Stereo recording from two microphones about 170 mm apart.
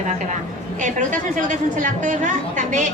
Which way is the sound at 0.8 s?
50° right (ahead or behind).